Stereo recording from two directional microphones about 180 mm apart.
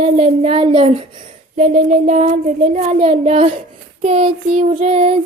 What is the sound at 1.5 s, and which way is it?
Child singing, 40° right (ahead or behind).